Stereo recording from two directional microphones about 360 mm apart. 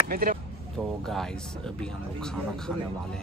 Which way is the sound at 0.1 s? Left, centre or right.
Right.